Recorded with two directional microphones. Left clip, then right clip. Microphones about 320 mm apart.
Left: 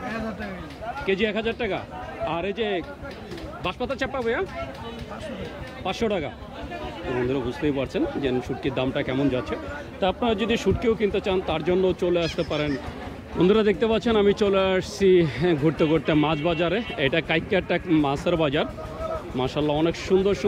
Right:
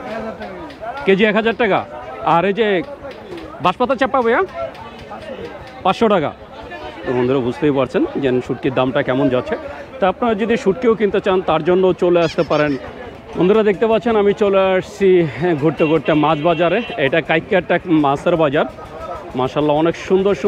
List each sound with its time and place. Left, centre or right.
1.0 s a man's voice: right
5.9 s speech: right
13.4 s speech: centre